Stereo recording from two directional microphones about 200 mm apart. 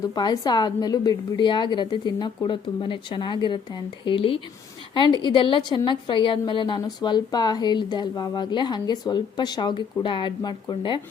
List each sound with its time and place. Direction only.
0.1 s a woman's voice: 20° left (ahead or behind)